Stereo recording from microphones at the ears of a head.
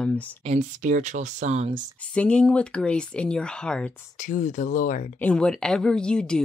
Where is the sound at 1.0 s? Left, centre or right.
Right.